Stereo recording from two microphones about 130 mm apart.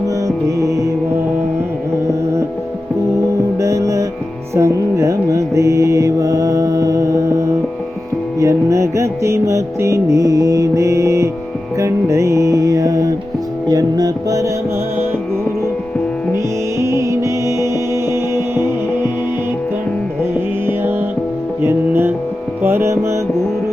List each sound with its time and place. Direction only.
0.4 s music: 25° right (ahead or behind)
3.6 s music: 25° right (ahead or behind)
4.5 s mantra: 25° right (ahead or behind)
8.4 s music: 25° right (ahead or behind)
16.8 s music: 25° right (ahead or behind)
21.6 s music: 15° right (ahead or behind)